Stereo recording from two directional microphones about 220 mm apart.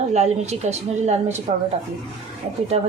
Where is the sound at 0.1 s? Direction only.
30° right (ahead or behind).